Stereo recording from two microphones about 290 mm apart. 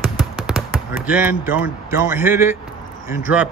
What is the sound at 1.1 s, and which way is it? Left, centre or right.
A man's voice, centre.